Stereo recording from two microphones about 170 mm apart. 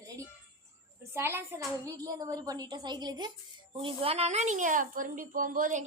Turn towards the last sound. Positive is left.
turn(degrees=-50)  # may be behind; listen again after turning